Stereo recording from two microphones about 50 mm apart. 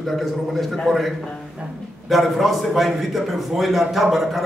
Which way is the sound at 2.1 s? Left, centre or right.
Centre.